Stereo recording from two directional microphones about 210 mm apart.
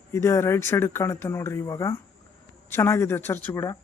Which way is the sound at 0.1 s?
15° left (ahead or behind).